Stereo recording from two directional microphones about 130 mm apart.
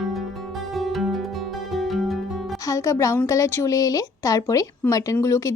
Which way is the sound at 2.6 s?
25° left (ahead or behind).